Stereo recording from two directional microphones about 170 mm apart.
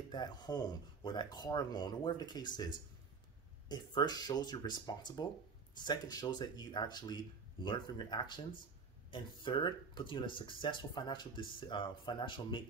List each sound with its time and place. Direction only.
0.1 s speech: 25° left (ahead or behind)